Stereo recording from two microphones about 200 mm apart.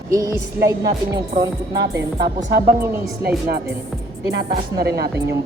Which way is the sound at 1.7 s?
55° right (ahead or behind).